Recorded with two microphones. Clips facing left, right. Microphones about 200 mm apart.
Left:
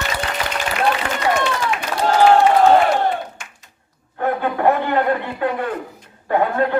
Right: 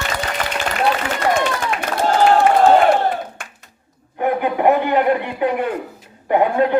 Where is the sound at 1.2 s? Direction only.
55° right (ahead or behind).